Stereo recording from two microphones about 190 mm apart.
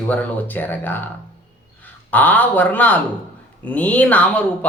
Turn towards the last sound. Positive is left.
turn(degrees=5)  # may be behind; listen again after turning